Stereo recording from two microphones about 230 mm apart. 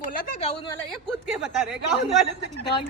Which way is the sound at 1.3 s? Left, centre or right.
Centre.